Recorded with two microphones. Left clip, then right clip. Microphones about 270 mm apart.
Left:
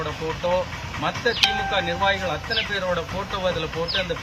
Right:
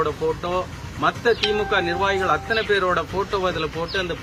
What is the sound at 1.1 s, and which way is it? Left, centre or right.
Speech, centre.